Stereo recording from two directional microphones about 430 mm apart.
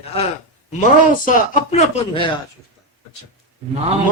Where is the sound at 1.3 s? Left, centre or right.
Centre.